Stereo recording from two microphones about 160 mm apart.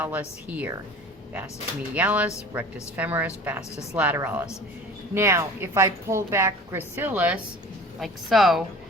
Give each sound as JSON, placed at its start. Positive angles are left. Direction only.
{"t": 0.0, "sound": "a woman's voice", "side_deg": -10}
{"t": 2.0, "sound": "a woman's voice", "side_deg": -10}